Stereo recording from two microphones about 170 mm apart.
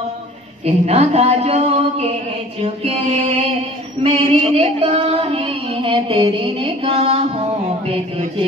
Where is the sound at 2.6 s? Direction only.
35° right (ahead or behind).